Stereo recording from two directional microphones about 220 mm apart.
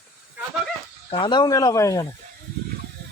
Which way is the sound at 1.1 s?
20° left (ahead or behind).